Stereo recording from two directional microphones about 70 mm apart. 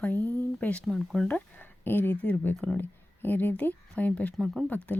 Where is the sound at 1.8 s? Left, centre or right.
Left.